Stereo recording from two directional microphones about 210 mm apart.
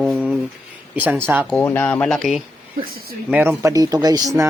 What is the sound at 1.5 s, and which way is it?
Speech, 10° left (ahead or behind).